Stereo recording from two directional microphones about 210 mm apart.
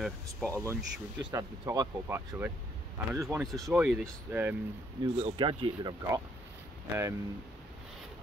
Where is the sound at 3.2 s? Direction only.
Centre (ahead or behind).